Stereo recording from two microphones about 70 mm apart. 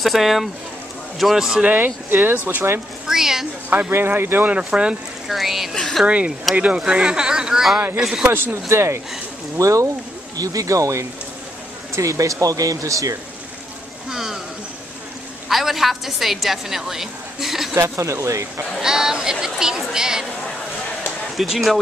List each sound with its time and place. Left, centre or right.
0.0 s speech: centre
1.7 s speech: right
3.1 s speech: centre
3.9 s speech: right
4.6 s speech: centre
5.3 s speech: centre
6.0 s speech: centre
8.3 s speech: right
14.0 s a sound: centre
15.4 s a sound: centre
17.7 s speech: right
18.8 s speech: centre
21.4 s speech: centre